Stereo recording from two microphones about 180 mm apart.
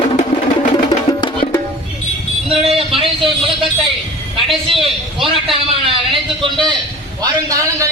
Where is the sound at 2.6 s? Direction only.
30° right (ahead or behind).